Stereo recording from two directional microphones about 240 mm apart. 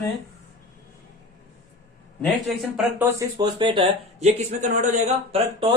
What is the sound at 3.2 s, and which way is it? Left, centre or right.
Speech, centre.